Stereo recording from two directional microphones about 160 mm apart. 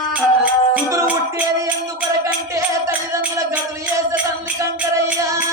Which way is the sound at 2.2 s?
20° right (ahead or behind).